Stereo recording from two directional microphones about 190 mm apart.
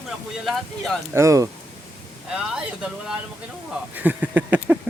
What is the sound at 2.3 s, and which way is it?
A man's voice, 5° right (ahead or behind).